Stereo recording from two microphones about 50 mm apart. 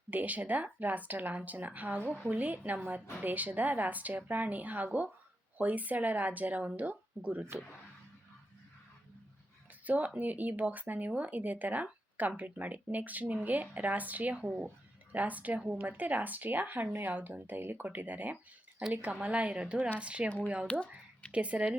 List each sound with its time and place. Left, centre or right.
0.1 s speech: right
9.8 s speech: right
17.8 s a woman's voice: right
20.7 s speech: left
21.3 s a woman's voice: right